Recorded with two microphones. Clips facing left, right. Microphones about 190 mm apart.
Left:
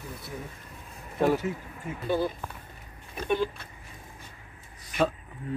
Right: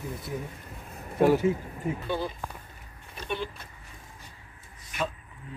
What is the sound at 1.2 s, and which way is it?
Speech, 15° right (ahead or behind).